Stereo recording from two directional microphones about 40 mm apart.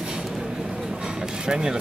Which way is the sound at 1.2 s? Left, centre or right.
Centre.